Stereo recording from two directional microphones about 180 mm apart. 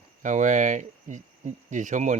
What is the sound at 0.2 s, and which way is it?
Speech, 45° right (ahead or behind).